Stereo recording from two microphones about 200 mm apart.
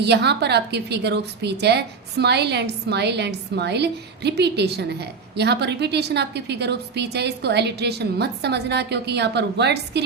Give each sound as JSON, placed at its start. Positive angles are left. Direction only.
{"t": 0.0, "sound": "a woman's voice", "side_deg": -55}